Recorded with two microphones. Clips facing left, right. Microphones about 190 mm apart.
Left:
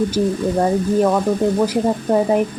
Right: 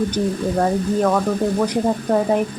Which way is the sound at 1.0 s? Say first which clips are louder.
Left 2 dB; 10° left (ahead or behind).